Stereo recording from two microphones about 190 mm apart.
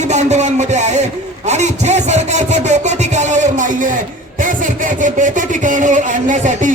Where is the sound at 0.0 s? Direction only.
35° right (ahead or behind).